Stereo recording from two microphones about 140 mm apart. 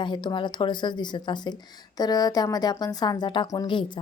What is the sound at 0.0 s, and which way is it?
Speech, 35° left (ahead or behind).